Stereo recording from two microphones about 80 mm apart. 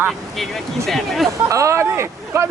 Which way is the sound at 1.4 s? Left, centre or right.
Right.